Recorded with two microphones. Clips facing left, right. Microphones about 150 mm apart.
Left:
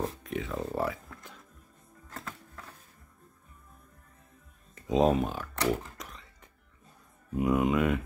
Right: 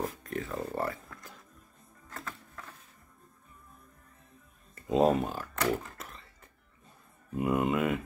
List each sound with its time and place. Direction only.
0.2 s speech: centre (ahead or behind)
2.1 s music: 25° left (ahead or behind)
4.7 s speech: centre (ahead or behind)
5.7 s guitar: centre (ahead or behind)
7.3 s speech: centre (ahead or behind)